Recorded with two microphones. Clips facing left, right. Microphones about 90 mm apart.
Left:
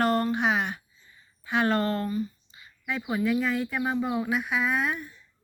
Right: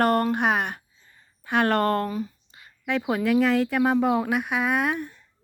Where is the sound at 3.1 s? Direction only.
75° right (ahead or behind); by 5.2 s 60° right (ahead or behind).